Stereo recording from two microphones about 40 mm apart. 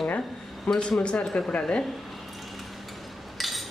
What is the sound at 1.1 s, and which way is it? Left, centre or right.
Speech, centre.